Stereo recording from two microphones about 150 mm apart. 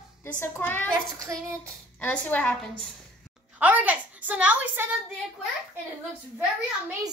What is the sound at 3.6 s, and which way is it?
A woman's voice, 10° right (ahead or behind).